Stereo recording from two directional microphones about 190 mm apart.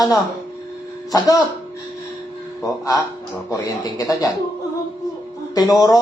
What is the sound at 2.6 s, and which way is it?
Speech, 20° left (ahead or behind).